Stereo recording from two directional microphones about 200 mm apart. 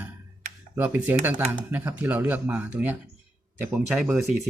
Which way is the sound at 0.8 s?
10° right (ahead or behind).